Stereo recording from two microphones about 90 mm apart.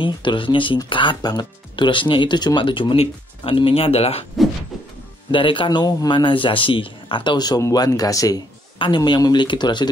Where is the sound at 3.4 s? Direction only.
85° left.